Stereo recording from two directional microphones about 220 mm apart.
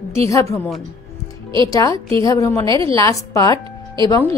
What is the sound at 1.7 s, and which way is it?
A woman's voice, 15° left (ahead or behind).